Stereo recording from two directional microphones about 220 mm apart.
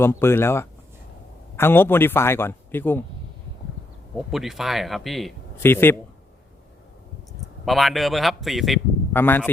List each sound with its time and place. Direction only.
0.0 s speech: 10° left (ahead or behind)
4.3 s a man's voice: centre (ahead or behind)
7.6 s a man's voice: centre (ahead or behind)